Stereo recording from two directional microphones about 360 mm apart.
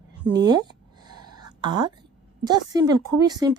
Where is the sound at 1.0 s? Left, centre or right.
Right.